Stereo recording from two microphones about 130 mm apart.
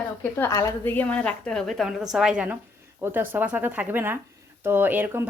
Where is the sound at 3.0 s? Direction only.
15° right (ahead or behind).